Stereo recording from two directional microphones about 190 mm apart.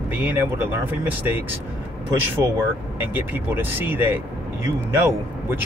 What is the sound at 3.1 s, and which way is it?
Speech, 10° right (ahead or behind).